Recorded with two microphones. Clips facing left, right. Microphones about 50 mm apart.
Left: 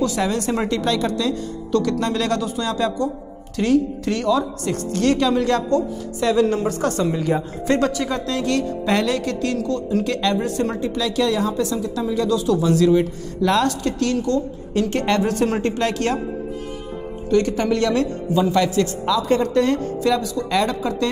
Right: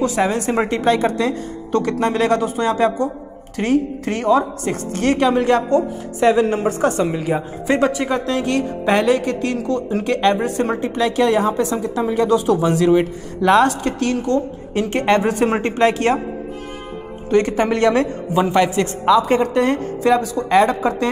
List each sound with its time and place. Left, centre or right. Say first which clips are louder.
0.0 s a woman's voice: right 3 dB; right
17.3 s a woman's voice: right 2 dB; right